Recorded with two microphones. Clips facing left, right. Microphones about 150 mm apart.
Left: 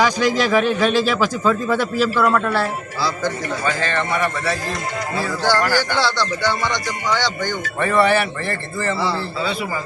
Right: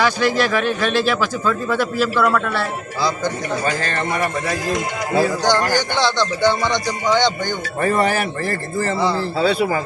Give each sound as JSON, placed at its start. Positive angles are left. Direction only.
{"t": 0.0, "sound": "speech", "side_deg": 10}
{"t": 3.6, "sound": "a man's voice", "side_deg": -40}
{"t": 5.4, "sound": "speech", "side_deg": -20}
{"t": 7.8, "sound": "a man's voice", "side_deg": -40}